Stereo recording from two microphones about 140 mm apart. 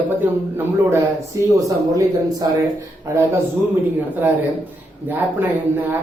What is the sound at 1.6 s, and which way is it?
Speech, 25° right (ahead or behind).